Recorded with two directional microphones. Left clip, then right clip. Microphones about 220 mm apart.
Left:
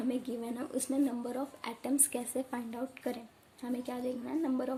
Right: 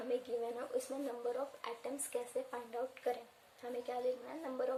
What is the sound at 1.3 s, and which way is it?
A woman's voice, 45° left (ahead or behind).